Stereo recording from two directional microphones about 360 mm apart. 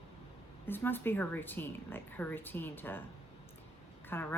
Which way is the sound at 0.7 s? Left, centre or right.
Centre.